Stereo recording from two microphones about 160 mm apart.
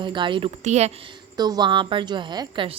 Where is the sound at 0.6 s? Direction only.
45° right (ahead or behind).